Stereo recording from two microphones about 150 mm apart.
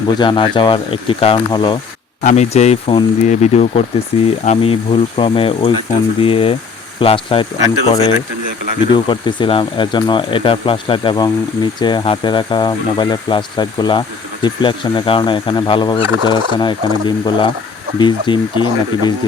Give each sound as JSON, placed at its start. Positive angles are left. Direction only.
{"t": 0.2, "sound": "speech", "side_deg": 30}
{"t": 2.2, "sound": "speech", "side_deg": 50}
{"t": 8.9, "sound": "speech", "side_deg": 30}